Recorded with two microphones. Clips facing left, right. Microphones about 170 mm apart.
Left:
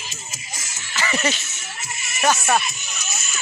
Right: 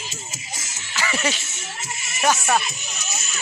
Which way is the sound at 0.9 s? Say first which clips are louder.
Left 1 dB; 10° right (ahead or behind).